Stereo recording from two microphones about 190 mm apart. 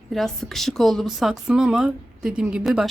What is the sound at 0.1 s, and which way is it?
A woman's voice, centre (ahead or behind).